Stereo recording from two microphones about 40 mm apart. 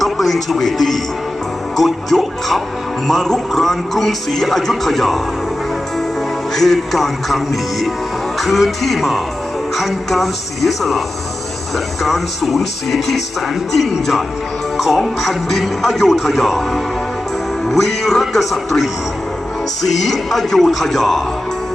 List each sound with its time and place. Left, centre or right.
0.0 s a man's voice: centre
6.5 s speech: centre
12.0 s speech: centre